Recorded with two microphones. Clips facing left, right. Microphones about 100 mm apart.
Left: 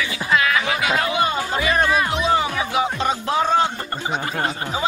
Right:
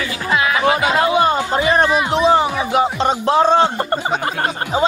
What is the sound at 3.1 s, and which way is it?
Speech, 30° right (ahead or behind).